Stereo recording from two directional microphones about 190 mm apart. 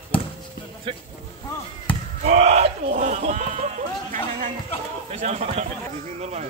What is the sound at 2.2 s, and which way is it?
Speech, 35° right (ahead or behind).